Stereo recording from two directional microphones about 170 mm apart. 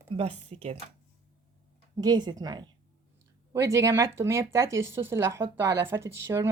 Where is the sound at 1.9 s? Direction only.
25° right (ahead or behind).